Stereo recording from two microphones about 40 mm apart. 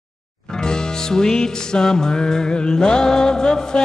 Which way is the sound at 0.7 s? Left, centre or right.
Centre.